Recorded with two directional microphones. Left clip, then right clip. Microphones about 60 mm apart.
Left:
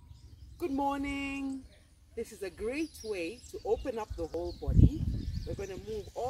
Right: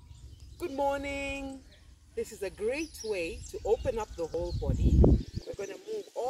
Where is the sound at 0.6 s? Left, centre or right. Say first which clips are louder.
Right 2 dB; left.